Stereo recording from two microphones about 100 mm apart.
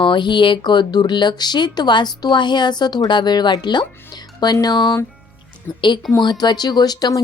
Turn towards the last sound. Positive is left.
turn(degrees=40)  # may be behind; listen again after turning